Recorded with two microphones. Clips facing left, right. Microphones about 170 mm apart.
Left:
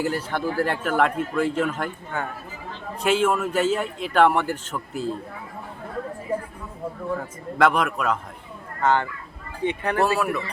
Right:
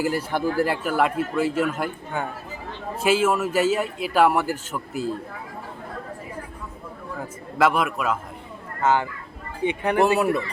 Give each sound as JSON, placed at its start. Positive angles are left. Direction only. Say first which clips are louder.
{"t": 0.0, "sound": "speech", "louder": "right 2 dB", "side_deg": -10}
{"t": 7.6, "sound": "speech", "louder": "even", "side_deg": -5}